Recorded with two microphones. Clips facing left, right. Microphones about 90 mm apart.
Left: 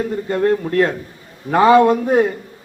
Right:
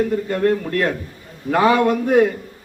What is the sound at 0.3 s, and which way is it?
A man's voice, 25° left (ahead or behind).